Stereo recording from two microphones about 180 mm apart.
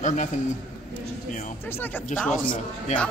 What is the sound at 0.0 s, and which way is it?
Speech, 40° left (ahead or behind).